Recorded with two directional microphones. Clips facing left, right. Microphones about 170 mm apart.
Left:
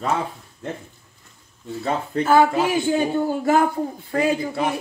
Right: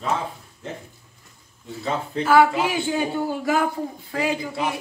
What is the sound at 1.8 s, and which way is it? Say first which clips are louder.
Speech: left 2 dB; 50° left (ahead or behind).